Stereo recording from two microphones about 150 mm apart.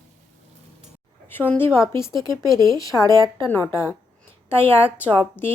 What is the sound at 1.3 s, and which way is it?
A woman's voice, 15° left (ahead or behind).